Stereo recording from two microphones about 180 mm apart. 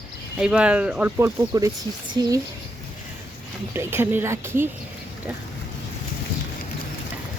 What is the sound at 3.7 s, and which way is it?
Speech, 10° right (ahead or behind).